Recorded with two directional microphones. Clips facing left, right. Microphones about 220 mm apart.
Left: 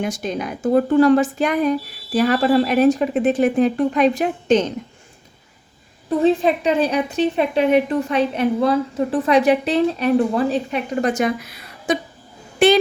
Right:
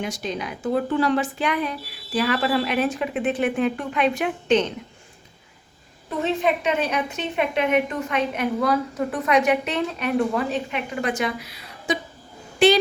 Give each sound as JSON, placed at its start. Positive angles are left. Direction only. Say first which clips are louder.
{"t": 0.0, "sound": "a woman's voice", "louder": "left 5 dB", "side_deg": 50}
{"t": 6.2, "sound": "a woman's voice", "louder": "left 6 dB", "side_deg": 35}